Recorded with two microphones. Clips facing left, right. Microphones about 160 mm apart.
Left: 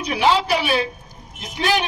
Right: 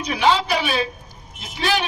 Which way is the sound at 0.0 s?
10° left (ahead or behind).